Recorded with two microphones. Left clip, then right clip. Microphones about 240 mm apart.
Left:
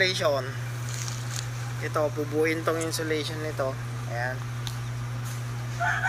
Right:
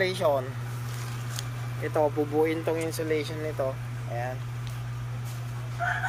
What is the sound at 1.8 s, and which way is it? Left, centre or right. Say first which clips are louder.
Speech: right 2 dB; centre.